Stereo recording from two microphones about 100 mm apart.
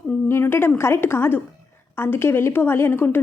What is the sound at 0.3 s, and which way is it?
A woman's voice, 25° left (ahead or behind).